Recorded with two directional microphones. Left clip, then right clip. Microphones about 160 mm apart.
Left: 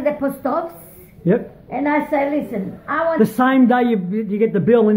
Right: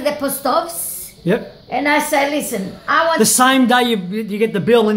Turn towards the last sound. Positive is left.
turn(degrees=0)  # may be behind; listen again after turning